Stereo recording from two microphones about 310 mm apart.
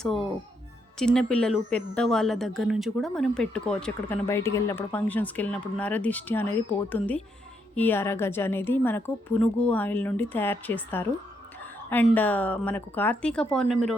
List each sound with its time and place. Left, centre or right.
0.0 s speech: centre
7.8 s a woman's voice: centre